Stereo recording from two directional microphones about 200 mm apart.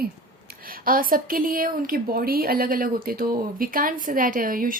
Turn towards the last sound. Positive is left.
turn(degrees=-45)  # may be behind; listen again after turning